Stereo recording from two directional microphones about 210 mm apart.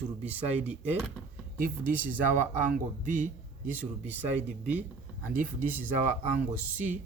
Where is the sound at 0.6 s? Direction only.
10° right (ahead or behind).